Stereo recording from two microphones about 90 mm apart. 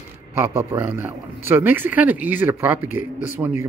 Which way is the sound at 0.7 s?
25° right (ahead or behind).